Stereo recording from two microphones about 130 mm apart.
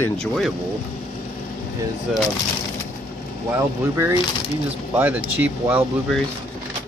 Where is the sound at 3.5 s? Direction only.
20° right (ahead or behind).